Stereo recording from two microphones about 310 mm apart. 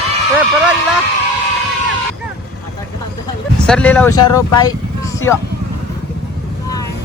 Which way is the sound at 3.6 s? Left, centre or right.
Centre.